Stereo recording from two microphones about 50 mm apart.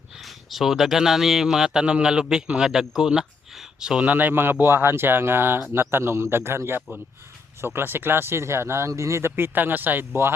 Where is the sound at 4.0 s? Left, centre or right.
Right.